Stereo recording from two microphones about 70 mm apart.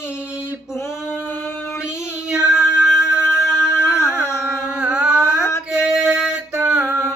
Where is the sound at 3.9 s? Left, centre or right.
Left.